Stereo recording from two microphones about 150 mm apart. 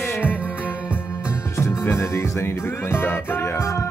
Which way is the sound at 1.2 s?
20° left (ahead or behind).